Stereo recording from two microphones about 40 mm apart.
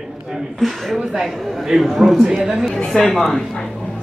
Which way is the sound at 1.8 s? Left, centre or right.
Centre.